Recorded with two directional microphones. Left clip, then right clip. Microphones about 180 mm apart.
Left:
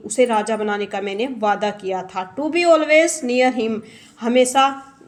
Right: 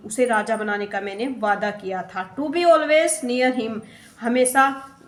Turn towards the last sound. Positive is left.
turn(degrees=35)  # may be behind; listen again after turning